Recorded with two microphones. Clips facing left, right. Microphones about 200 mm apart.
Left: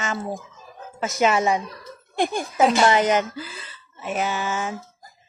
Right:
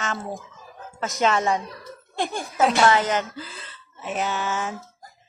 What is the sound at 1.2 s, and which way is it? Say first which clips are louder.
Speech: left 2 dB; 15° left (ahead or behind).